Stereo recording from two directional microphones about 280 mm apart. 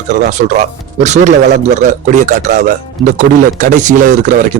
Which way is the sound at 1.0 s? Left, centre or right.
Right.